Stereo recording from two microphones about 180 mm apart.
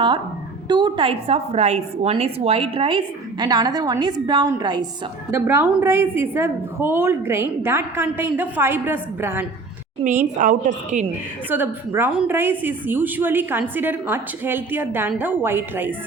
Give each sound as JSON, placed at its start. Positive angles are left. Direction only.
{"t": 0.7, "sound": "a woman's voice", "side_deg": -25}
{"t": 10.0, "sound": "a woman's voice", "side_deg": -45}
{"t": 11.4, "sound": "a woman's voice", "side_deg": -10}